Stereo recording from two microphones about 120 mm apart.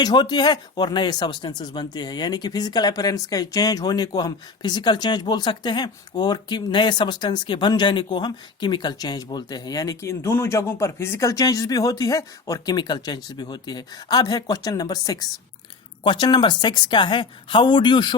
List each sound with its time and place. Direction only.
0.0 s speech: 35° left (ahead or behind)